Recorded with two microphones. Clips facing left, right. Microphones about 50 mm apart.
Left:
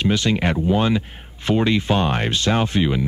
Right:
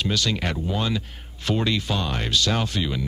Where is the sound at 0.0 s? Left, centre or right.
Left.